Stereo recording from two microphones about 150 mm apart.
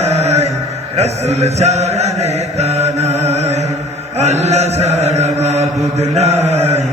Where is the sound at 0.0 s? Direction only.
45° right (ahead or behind).